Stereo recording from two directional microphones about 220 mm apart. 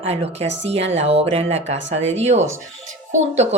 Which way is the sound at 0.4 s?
55° right (ahead or behind).